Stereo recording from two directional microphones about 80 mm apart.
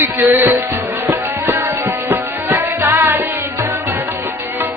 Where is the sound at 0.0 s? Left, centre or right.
Right.